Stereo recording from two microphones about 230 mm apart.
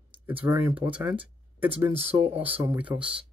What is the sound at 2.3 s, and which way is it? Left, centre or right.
Speech, centre.